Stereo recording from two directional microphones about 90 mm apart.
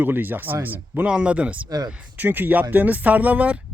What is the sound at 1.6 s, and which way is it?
Speech, 45° right (ahead or behind).